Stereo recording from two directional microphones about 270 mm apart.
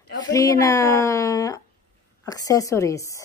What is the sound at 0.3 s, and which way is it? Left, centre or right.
Speech, centre.